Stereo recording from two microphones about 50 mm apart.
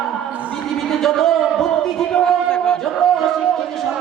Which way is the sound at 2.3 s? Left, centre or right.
Centre.